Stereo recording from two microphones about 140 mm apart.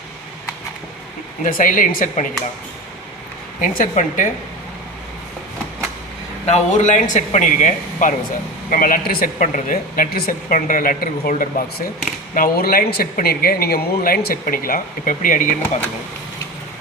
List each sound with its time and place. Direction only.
1.5 s speech: 80° left
3.6 s speech: 70° left (ahead or behind)
6.4 s speech: 55° left (ahead or behind)
8.7 s speech: 80° left
12.3 s speech: 90° left; by 15.8 s 70° left (ahead or behind)